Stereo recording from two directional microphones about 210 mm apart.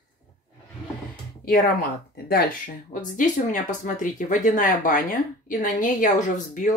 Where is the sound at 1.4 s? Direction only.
45° left (ahead or behind).